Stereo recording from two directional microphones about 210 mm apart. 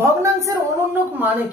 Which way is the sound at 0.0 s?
15° right (ahead or behind).